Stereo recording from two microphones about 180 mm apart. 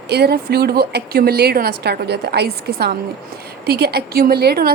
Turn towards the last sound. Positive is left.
turn(degrees=-60)  # may be behind; listen again after turning